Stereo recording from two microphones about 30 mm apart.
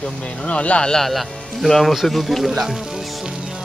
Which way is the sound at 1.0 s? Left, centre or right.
Centre.